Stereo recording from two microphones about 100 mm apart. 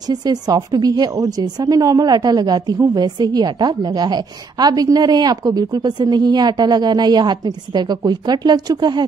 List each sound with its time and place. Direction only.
0.1 s a woman's voice: 40° right (ahead or behind)